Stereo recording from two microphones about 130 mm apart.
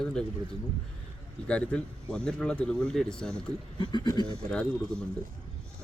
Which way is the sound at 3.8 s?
35° left (ahead or behind).